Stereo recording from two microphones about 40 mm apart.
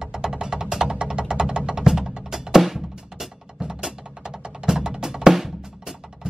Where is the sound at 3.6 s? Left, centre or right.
Centre.